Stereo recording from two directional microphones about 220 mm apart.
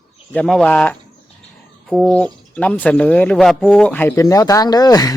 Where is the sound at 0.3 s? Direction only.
5° left (ahead or behind).